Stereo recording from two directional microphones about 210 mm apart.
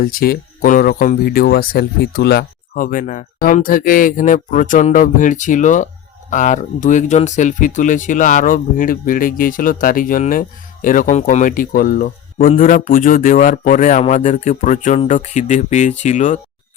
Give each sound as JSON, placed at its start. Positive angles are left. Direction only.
{"t": 0.0, "sound": "speech", "side_deg": 45}